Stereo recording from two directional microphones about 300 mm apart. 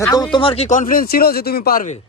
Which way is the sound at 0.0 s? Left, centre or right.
Centre.